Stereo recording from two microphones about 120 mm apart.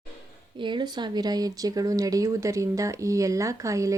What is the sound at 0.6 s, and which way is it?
Speech, 40° right (ahead or behind).